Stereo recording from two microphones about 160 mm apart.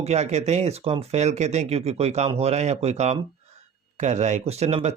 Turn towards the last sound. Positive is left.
turn(degrees=-40)  # may be behind; listen again after turning